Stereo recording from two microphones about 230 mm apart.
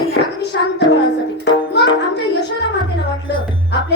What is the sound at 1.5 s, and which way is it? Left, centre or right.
Music, left.